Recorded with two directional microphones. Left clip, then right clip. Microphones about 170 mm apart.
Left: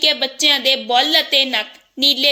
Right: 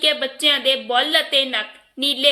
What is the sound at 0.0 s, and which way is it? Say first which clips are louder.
A woman's voice: left 2 dB; 30° left (ahead or behind).